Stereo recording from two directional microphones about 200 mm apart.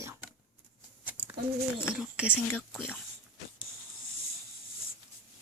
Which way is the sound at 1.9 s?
5° right (ahead or behind).